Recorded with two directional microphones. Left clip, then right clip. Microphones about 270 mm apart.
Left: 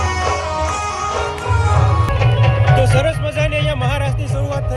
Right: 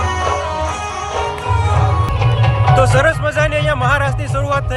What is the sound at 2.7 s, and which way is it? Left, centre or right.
Music, centre.